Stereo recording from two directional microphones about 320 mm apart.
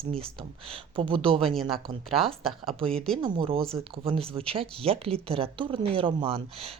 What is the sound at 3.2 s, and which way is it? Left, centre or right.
Speech, centre.